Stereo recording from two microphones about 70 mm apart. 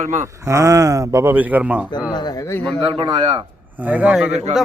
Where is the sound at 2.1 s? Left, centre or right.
Left.